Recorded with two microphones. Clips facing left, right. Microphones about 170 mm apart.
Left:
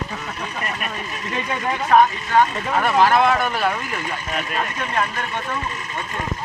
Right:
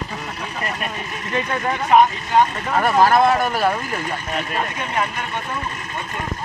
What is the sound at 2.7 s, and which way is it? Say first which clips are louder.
Speech: right 2 dB; 40° right (ahead or behind).